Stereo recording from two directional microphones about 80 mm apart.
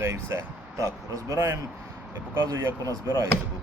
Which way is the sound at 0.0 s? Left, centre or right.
Right.